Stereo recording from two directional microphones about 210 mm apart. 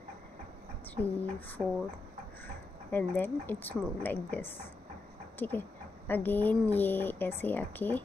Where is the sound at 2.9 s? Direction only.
10° left (ahead or behind).